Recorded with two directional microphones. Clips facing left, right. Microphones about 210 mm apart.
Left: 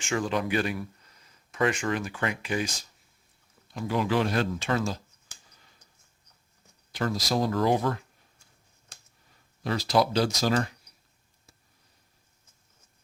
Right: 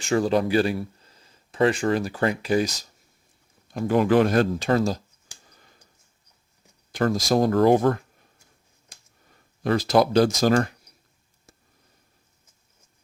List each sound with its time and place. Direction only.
0.0 s speech: 35° right (ahead or behind)
3.7 s speech: 50° right (ahead or behind)
6.9 s speech: 50° right (ahead or behind)
9.6 s speech: 50° right (ahead or behind)